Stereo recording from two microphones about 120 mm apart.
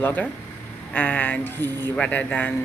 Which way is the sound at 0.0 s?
15° left (ahead or behind).